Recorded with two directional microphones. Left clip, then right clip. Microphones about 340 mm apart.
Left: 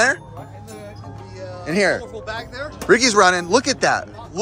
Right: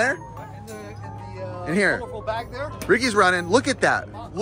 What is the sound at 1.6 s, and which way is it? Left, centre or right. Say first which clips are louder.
Speech: left 3 dB; centre.